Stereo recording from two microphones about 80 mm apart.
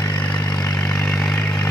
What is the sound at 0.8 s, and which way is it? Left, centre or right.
Vehicle, centre.